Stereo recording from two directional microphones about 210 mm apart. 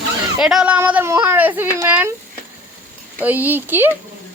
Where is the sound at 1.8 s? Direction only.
10° right (ahead or behind).